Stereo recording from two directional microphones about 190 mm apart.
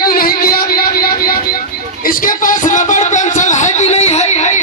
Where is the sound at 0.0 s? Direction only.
50° left (ahead or behind).